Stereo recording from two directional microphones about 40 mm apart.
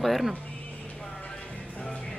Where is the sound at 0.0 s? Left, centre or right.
Centre.